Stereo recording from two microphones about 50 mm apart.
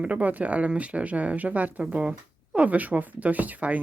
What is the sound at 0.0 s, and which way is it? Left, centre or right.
Speech, right.